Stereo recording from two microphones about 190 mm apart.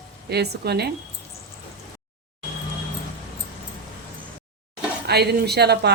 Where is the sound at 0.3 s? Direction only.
60° right (ahead or behind).